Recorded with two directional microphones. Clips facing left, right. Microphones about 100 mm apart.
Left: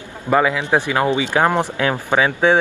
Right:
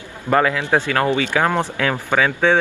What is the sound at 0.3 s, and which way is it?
Speech, 15° left (ahead or behind).